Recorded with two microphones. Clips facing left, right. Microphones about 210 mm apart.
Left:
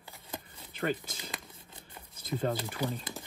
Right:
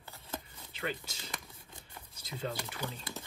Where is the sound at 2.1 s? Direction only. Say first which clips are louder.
Left 7 dB; 50° left (ahead or behind).